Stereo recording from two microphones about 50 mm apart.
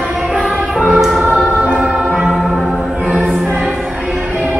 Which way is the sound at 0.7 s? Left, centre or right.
Centre.